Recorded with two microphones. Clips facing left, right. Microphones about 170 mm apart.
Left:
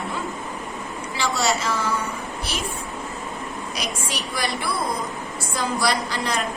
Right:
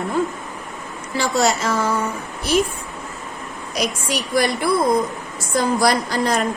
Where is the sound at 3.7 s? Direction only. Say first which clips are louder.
Right 9 dB; 45° right (ahead or behind).